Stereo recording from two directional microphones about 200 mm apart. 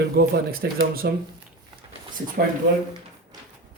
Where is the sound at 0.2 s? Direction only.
50° right (ahead or behind).